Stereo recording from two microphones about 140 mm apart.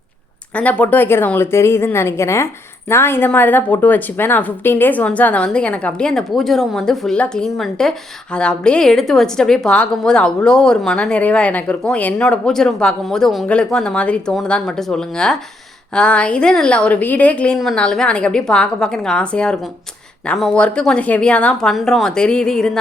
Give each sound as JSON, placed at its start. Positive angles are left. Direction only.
{"t": 0.5, "sound": "a woman's voice", "side_deg": 10}